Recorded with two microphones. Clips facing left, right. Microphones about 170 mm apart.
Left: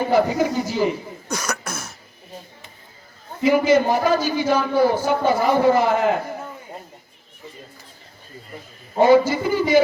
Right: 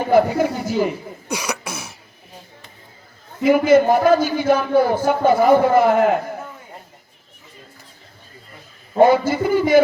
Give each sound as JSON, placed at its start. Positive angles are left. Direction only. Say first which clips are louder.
{"t": 0.1, "sound": "speech", "louder": "right 5 dB", "side_deg": -55}
{"t": 1.3, "sound": "cough", "louder": "right 1 dB", "side_deg": -10}
{"t": 3.4, "sound": "a man's voice", "louder": "right 3 dB", "side_deg": -55}
{"t": 9.0, "sound": "a man's voice", "louder": "right 1 dB", "side_deg": -55}